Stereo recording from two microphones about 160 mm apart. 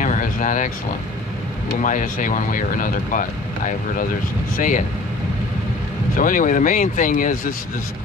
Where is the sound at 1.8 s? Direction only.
55° left (ahead or behind).